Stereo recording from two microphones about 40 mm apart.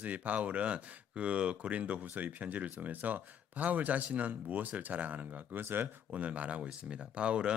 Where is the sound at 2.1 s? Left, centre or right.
Right.